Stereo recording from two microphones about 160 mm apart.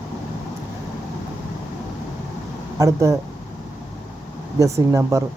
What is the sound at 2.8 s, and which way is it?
Speech, 20° right (ahead or behind).